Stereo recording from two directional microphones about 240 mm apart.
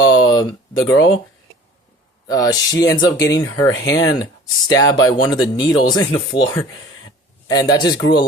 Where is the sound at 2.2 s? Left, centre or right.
Centre.